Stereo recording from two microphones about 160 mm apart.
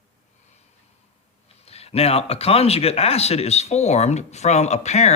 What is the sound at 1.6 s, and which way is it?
Speech, 40° left (ahead or behind).